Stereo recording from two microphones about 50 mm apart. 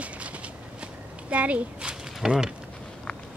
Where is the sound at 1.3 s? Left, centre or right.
Right.